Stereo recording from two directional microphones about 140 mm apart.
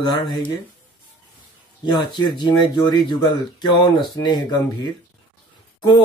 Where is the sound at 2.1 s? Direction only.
30° left (ahead or behind).